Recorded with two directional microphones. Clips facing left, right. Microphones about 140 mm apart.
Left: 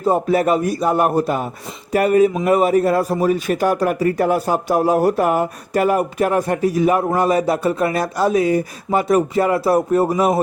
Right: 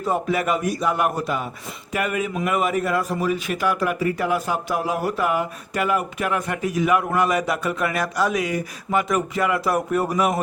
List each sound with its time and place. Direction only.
0.0 s a man's voice: 40° left (ahead or behind)